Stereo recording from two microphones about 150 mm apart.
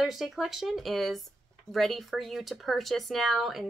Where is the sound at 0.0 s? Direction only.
Centre (ahead or behind).